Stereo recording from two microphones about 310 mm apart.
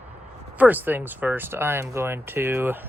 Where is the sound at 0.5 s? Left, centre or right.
Centre.